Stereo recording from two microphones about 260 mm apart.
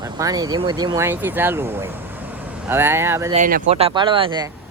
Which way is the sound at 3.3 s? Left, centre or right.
Right.